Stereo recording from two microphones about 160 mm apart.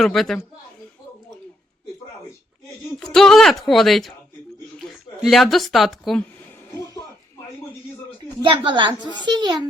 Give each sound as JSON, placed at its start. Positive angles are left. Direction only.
{"t": 0.0, "sound": "speech", "side_deg": 0}
{"t": 3.0, "sound": "speech", "side_deg": 5}
{"t": 5.2, "sound": "speech", "side_deg": 0}
{"t": 8.4, "sound": "a woman's voice", "side_deg": -30}